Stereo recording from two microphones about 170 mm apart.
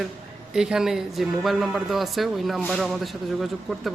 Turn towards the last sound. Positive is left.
turn(degrees=0)  # may be behind; listen again after turning